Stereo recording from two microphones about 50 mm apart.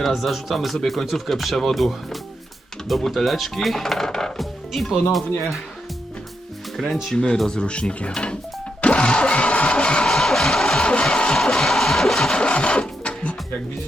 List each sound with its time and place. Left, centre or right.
0.0 s speech: centre
6.7 s speech: centre
7.3 s speech: centre
8.8 s music: left
10.1 s music: centre
12.4 s sewing machine: centre